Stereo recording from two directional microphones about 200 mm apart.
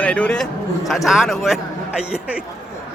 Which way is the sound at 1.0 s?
Centre (ahead or behind).